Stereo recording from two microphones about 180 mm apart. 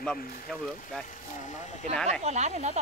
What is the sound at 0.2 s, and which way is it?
Speech, 50° left (ahead or behind).